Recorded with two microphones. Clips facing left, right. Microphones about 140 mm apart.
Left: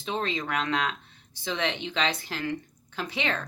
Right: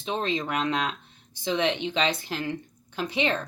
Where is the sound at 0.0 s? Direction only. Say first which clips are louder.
Right 2 dB; 20° right (ahead or behind).